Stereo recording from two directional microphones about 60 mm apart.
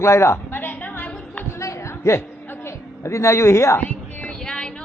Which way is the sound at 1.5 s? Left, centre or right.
Left.